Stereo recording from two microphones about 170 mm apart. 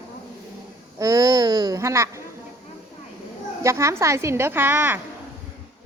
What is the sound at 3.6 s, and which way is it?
A woman's voice, 15° right (ahead or behind).